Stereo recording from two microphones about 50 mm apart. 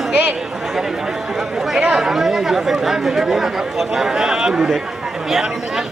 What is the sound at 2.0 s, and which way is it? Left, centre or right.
Speech, centre.